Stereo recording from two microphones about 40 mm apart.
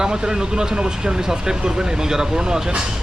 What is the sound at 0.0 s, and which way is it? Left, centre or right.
Speech, centre.